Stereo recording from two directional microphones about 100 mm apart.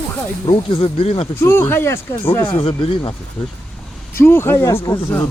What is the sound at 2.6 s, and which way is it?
Speech, 60° left (ahead or behind).